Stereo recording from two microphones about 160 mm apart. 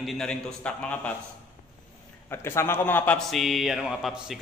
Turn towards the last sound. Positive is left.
turn(degrees=0)  # may be behind; listen again after turning